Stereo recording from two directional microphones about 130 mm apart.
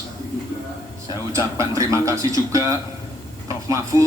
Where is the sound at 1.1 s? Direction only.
25° right (ahead or behind).